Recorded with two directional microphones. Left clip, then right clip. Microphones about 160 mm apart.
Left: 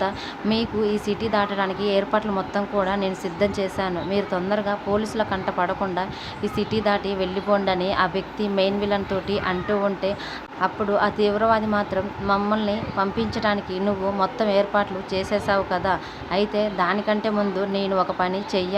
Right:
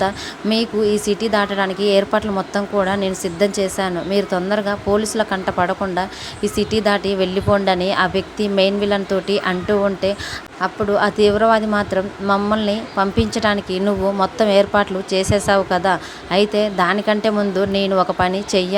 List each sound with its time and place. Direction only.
0.0 s speech: 40° right (ahead or behind)